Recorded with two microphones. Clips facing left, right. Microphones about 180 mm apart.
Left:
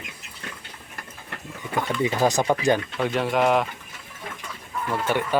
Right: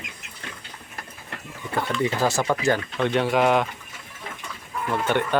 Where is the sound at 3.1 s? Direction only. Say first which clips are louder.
Right 1 dB; centre (ahead or behind).